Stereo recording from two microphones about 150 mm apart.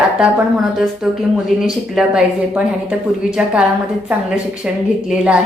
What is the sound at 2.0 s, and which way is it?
A woman's voice, 5° right (ahead or behind).